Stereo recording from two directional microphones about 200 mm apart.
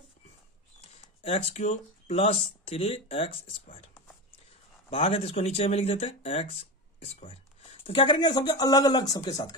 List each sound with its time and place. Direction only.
1.2 s speech: 30° left (ahead or behind)
4.8 s speech: 30° left (ahead or behind)